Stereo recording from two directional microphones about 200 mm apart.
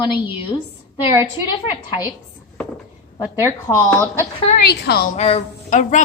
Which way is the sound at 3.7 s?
10° left (ahead or behind).